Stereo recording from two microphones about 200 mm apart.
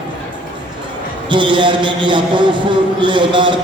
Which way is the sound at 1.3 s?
25° right (ahead or behind).